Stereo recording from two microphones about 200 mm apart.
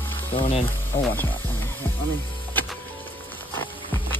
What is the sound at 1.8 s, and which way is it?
Music, 10° left (ahead or behind).